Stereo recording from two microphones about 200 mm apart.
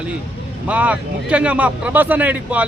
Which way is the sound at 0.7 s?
5° right (ahead or behind).